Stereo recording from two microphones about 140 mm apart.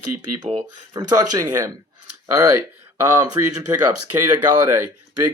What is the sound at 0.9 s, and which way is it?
Speech, 30° right (ahead or behind).